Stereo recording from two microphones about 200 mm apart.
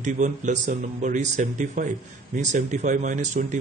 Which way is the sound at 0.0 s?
40° right (ahead or behind).